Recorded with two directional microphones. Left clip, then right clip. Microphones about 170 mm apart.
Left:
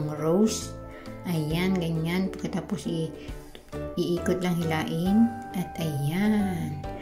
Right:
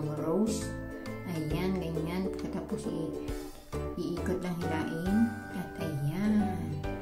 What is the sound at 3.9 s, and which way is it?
Speech, 25° left (ahead or behind).